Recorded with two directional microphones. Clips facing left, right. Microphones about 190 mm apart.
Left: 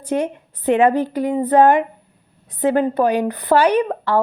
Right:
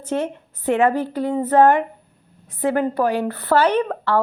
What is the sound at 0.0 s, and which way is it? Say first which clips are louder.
A woman's voice: left 2 dB; 15° left (ahead or behind).